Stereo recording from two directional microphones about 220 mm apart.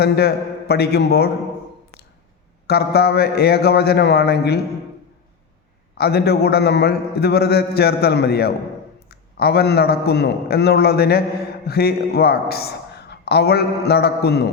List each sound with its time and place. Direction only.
0.0 s speech: 45° left (ahead or behind)
2.6 s speech: 45° left (ahead or behind)
6.0 s speech: 45° left (ahead or behind)